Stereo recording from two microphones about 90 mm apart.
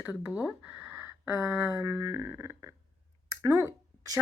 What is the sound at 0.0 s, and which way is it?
Speech, 15° right (ahead or behind).